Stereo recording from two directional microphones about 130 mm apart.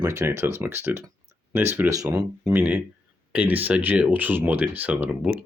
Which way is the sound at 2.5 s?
15° right (ahead or behind).